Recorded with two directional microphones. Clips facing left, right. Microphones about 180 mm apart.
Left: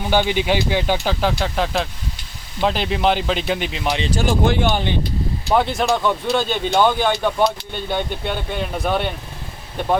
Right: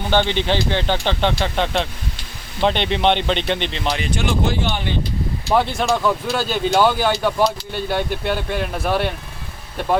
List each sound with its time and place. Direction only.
0.1 s speech: 10° left (ahead or behind)
4.1 s speech: 45° left (ahead or behind)
5.5 s speech: centre (ahead or behind)